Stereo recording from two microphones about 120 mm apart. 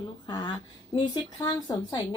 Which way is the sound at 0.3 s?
40° left (ahead or behind).